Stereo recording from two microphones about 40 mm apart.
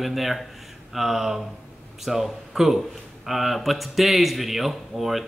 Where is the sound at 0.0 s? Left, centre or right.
Centre.